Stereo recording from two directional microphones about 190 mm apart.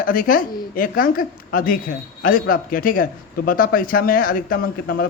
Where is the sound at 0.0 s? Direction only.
45° left (ahead or behind).